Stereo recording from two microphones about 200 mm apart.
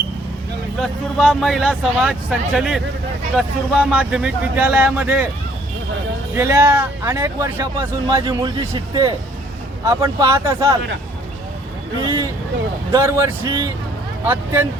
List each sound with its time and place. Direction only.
0.8 s speech: centre (ahead or behind)
6.3 s speech: 10° right (ahead or behind)
12.0 s a sound: 20° right (ahead or behind)
12.9 s speech: 10° right (ahead or behind)